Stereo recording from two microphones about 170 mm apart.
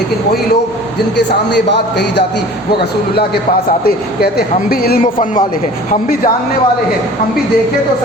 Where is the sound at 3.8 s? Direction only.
60° left (ahead or behind).